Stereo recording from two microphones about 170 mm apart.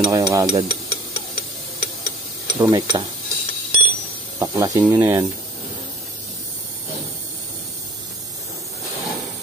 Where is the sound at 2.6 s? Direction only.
25° right (ahead or behind).